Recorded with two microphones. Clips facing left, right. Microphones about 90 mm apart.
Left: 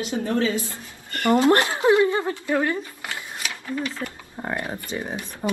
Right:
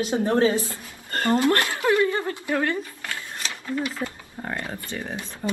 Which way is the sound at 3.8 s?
15° right (ahead or behind).